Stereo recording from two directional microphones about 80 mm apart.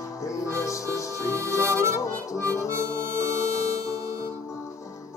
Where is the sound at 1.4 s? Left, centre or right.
Left.